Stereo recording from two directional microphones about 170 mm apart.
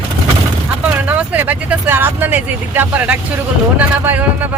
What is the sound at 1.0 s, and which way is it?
Speech, 10° right (ahead or behind).